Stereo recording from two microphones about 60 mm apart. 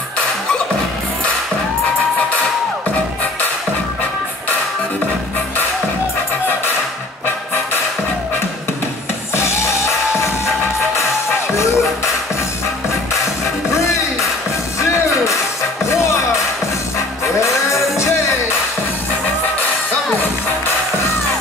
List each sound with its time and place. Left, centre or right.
9.3 s music: left
11.5 s music: left
15.8 s music: left
17.4 s music: left